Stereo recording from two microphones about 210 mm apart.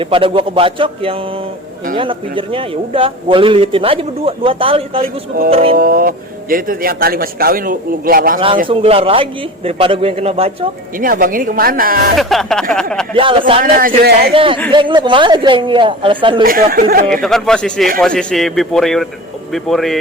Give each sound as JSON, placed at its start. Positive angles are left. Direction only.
{"t": 0.0, "sound": "a man's voice", "side_deg": -25}
{"t": 5.7, "sound": "speech", "side_deg": -45}
{"t": 8.6, "sound": "a man's voice", "side_deg": -25}
{"t": 10.9, "sound": "speech", "side_deg": -40}
{"t": 12.1, "sound": "speech", "side_deg": 0}
{"t": 13.7, "sound": "speech", "side_deg": -45}
{"t": 14.3, "sound": "a man's voice", "side_deg": -25}
{"t": 16.4, "sound": "speech", "side_deg": -45}
{"t": 17.1, "sound": "speech", "side_deg": 0}